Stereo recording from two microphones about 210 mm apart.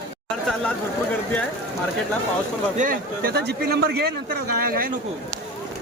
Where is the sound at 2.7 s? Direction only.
40° right (ahead or behind).